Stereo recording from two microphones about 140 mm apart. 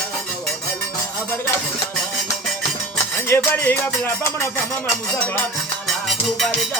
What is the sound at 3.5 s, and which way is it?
Music, 15° left (ahead or behind).